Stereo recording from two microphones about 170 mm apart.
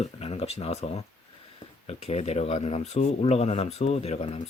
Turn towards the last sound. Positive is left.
turn(degrees=35)  # may be behind; listen again after turning